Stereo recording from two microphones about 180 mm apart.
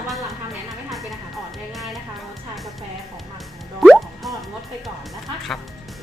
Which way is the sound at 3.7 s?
Centre (ahead or behind).